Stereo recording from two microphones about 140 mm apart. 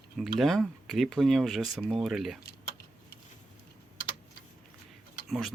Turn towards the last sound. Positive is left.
turn(degrees=0)  # may be behind; listen again after turning